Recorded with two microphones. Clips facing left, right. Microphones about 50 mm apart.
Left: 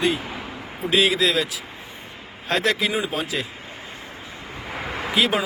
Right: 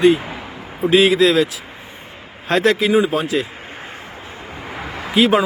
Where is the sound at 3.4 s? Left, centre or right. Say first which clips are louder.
Right 4 dB; right.